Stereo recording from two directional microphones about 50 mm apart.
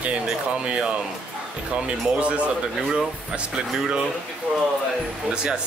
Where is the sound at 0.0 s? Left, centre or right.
Right.